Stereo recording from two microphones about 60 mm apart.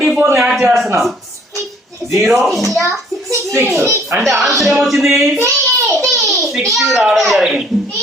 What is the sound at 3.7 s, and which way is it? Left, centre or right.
Speech, right.